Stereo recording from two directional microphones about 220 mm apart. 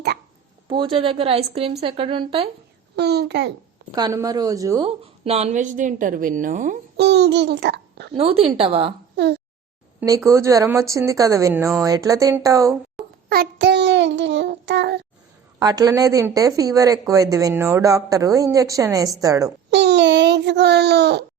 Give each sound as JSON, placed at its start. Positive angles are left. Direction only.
{"t": 0.7, "sound": "speech", "side_deg": -20}
{"t": 2.9, "sound": "child singing", "side_deg": -50}
{"t": 3.9, "sound": "a woman's voice", "side_deg": -15}
{"t": 5.2, "sound": "a woman's voice", "side_deg": -30}
{"t": 6.9, "sound": "a child's voice", "side_deg": -50}
{"t": 8.1, "sound": "speech", "side_deg": -25}
{"t": 10.2, "sound": "a woman's voice", "side_deg": -15}
{"t": 13.2, "sound": "child singing", "side_deg": -45}
{"t": 15.5, "sound": "a woman's voice", "side_deg": -15}
{"t": 19.7, "sound": "a child's voice", "side_deg": -50}